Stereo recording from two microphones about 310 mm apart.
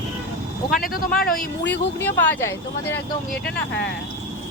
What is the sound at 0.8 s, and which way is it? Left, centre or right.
Speech, left.